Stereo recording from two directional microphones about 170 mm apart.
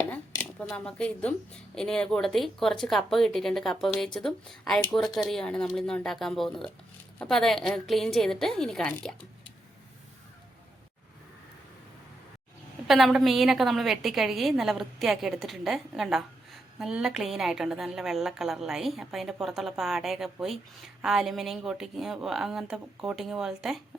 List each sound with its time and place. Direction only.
0.1 s a woman's voice: 10° left (ahead or behind)
12.9 s a woman's voice: centre (ahead or behind)